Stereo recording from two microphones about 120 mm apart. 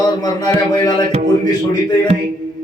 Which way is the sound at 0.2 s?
35° left (ahead or behind).